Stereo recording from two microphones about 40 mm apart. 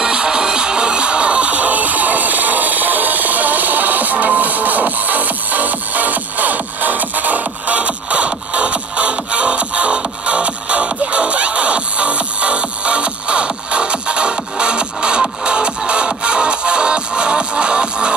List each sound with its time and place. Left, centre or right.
0.0 s music: right